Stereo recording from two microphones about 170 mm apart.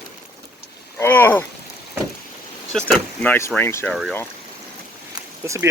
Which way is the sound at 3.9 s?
Centre (ahead or behind).